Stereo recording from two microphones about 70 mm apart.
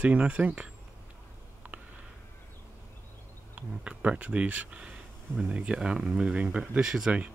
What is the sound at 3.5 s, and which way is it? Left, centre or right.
Speech, centre.